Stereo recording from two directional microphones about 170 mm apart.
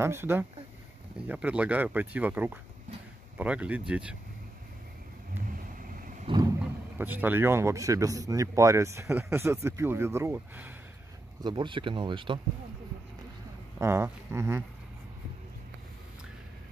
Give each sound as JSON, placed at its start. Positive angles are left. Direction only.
{"t": 0.0, "sound": "speech", "side_deg": -15}
{"t": 6.3, "sound": "vehicle", "side_deg": -30}
{"t": 6.6, "sound": "speech", "side_deg": -10}
{"t": 11.4, "sound": "speech", "side_deg": -25}
{"t": 13.7, "sound": "speech", "side_deg": -15}